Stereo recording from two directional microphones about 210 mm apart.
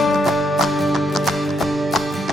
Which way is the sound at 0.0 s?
Centre (ahead or behind).